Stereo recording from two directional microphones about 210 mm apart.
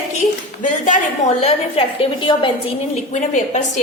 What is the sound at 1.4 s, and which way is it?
A woman's voice, 25° left (ahead or behind).